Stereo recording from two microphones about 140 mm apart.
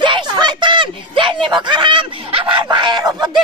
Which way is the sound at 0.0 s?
35° right (ahead or behind).